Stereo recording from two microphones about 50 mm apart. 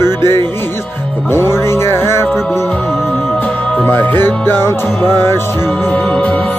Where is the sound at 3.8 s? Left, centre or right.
Left.